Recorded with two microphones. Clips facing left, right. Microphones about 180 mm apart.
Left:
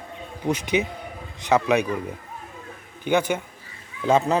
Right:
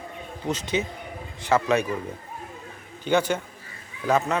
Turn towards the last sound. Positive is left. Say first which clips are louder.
# left 3 dB
turn(degrees=30)  # may be behind; listen again after turning